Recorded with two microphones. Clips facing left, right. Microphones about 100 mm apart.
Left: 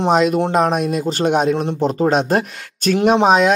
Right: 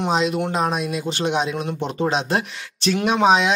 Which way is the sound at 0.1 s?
50° left (ahead or behind).